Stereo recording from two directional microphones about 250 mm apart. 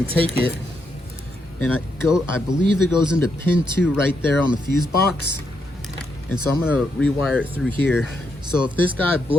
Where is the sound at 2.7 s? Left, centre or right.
Left.